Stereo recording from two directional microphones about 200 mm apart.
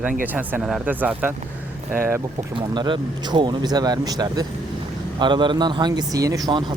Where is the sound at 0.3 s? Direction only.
10° right (ahead or behind).